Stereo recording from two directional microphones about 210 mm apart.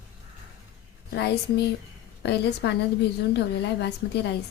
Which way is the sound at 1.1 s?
50° left (ahead or behind).